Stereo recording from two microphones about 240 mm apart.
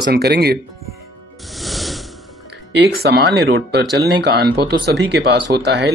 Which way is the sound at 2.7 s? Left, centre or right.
Right.